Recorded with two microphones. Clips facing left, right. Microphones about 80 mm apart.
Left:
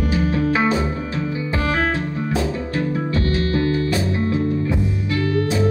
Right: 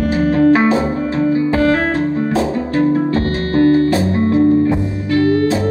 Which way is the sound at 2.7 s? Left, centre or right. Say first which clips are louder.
Right 9 dB; right.